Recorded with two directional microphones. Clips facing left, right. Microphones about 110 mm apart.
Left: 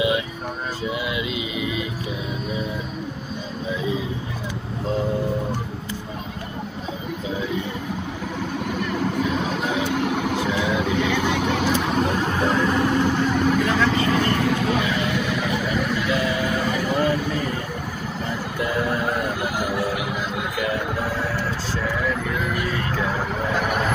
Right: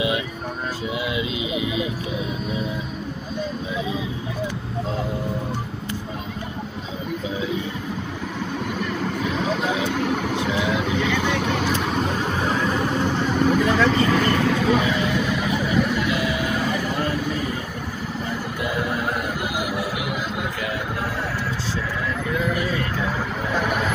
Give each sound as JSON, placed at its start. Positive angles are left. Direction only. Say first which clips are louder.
{"t": 1.1, "sound": "vehicle", "louder": "right 1 dB", "side_deg": -25}
{"t": 9.9, "sound": "vehicle", "louder": "even", "side_deg": 5}